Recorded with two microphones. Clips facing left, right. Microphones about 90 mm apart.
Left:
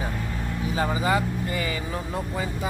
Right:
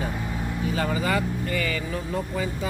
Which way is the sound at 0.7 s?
20° left (ahead or behind).